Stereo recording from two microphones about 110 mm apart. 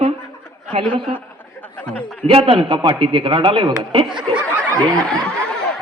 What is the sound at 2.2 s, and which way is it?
A man's voice, 55° right (ahead or behind).